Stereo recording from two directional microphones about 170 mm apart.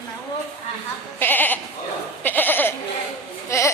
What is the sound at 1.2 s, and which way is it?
Goat, 10° left (ahead or behind).